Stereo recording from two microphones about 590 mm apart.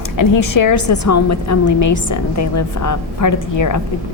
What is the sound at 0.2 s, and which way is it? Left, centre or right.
A woman's voice, left.